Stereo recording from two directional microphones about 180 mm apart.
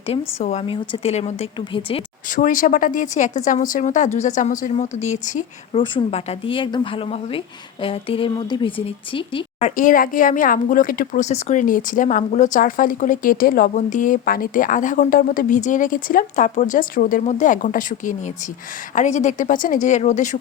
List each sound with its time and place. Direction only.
0.1 s a woman's voice: 35° left (ahead or behind)
2.3 s a woman's voice: 45° left (ahead or behind)
5.7 s a woman's voice: 30° left (ahead or behind)